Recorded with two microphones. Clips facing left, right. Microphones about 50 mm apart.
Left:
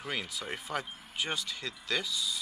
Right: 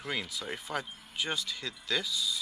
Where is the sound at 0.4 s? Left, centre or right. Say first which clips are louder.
Even; centre.